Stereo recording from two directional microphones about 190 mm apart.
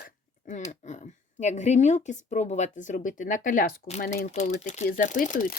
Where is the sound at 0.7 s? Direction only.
40° left (ahead or behind).